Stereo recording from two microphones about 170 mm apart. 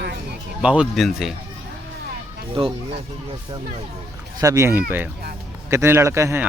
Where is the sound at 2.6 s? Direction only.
30° right (ahead or behind).